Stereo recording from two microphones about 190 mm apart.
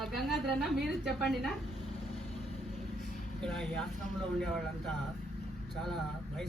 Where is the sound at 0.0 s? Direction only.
Centre (ahead or behind).